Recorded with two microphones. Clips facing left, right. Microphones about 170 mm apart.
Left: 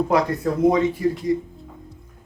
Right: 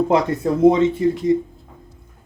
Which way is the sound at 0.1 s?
25° right (ahead or behind).